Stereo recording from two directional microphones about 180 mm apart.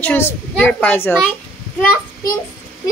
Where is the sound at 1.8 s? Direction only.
10° left (ahead or behind).